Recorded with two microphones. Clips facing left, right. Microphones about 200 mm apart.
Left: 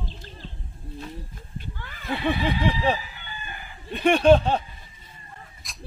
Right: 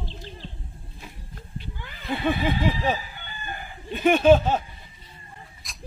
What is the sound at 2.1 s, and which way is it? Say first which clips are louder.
Snicker: right 1 dB; centre (ahead or behind).